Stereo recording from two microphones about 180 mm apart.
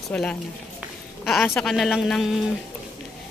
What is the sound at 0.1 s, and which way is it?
A man's voice, 5° left (ahead or behind).